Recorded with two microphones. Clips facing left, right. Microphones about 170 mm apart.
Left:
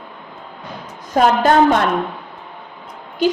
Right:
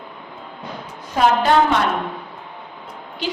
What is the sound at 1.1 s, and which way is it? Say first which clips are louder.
Speech: left 2 dB; 45° left (ahead or behind).